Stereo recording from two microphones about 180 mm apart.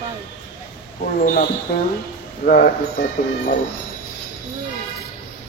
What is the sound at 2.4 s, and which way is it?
Speech, 50° left (ahead or behind).